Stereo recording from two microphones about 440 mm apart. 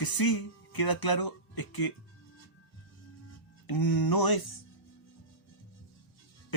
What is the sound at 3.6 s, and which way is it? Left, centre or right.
Speech, left.